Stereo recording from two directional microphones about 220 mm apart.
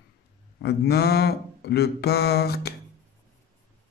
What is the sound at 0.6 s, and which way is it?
Mantra, 45° left (ahead or behind).